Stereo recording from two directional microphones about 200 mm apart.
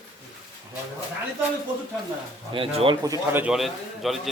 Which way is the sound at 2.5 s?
30° right (ahead or behind).